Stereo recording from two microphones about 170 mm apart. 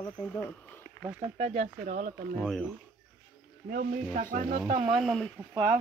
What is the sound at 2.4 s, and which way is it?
Speech, 5° left (ahead or behind).